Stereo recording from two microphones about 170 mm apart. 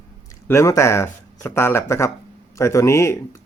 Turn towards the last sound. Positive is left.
turn(degrees=15)  # may be behind; listen again after turning